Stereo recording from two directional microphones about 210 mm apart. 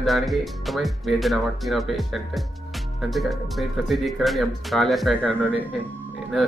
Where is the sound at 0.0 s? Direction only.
Centre (ahead or behind).